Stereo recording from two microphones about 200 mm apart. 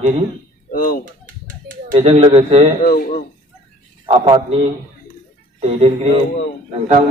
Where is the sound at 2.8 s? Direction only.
45° left (ahead or behind).